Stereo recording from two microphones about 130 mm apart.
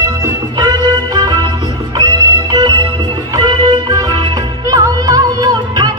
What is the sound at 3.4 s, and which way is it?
Music, 30° right (ahead or behind).